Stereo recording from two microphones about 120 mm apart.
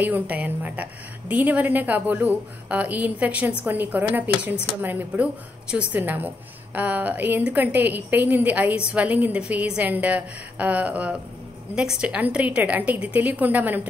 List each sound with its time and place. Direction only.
0.0 s a woman's voice: 15° right (ahead or behind)